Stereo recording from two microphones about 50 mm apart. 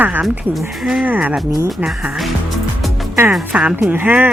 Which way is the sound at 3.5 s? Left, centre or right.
Right.